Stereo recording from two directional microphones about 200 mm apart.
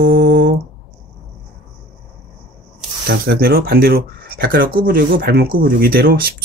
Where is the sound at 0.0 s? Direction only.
50° right (ahead or behind).